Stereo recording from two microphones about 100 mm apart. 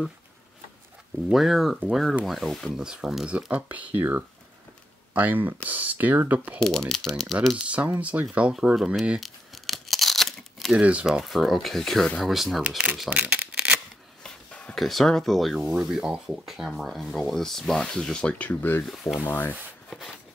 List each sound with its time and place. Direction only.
1.3 s speech: centre (ahead or behind)
6.6 s speech: 5° left (ahead or behind)
7.6 s speech: 15° right (ahead or behind)
9.2 s tearing: centre (ahead or behind)
10.8 s speech: 10° right (ahead or behind)
12.6 s speech: 15° right (ahead or behind)
13.1 s shuffling cards: 15° right (ahead or behind)
14.2 s burping: 10° left (ahead or behind)
14.8 s speech: centre (ahead or behind); by 18.9 s 20° left (ahead or behind)
19.1 s rub: 20° left (ahead or behind)